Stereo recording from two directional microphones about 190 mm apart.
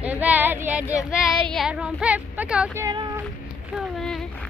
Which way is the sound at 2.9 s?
20° right (ahead or behind).